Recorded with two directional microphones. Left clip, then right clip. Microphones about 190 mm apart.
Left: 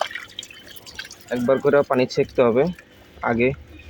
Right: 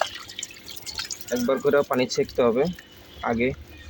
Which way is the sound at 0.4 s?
10° left (ahead or behind).